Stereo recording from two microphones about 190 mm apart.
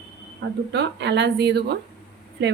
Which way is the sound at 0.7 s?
65° right (ahead or behind).